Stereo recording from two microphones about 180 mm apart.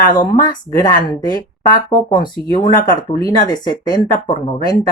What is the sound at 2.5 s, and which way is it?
Speech, 25° left (ahead or behind).